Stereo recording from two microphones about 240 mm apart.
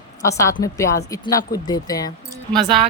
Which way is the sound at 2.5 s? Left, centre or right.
Centre.